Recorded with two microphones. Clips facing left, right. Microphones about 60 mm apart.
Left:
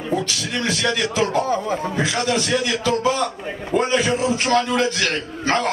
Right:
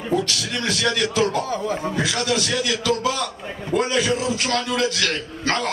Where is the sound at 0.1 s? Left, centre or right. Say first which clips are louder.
Right 1 dB; centre.